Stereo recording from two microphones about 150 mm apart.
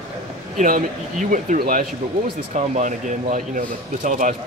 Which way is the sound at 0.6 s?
65° right (ahead or behind).